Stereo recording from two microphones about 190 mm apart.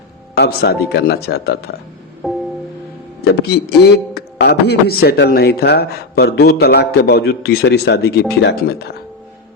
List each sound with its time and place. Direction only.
0.3 s a man's voice: 60° left (ahead or behind)
2.2 s music: 5° right (ahead or behind)
3.2 s a man's voice: 60° left (ahead or behind)